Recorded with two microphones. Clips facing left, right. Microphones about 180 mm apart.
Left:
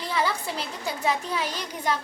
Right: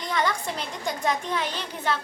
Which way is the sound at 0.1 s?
5° left (ahead or behind).